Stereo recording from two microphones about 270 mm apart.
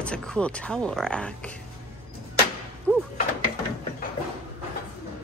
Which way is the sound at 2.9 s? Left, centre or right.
Centre.